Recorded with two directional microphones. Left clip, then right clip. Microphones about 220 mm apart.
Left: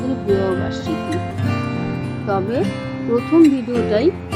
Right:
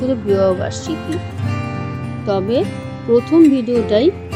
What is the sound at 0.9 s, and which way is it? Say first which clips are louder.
Music: left 1 dB; centre (ahead or behind).